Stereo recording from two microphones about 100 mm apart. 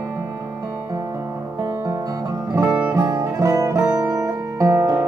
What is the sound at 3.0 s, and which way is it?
Music, 30° right (ahead or behind).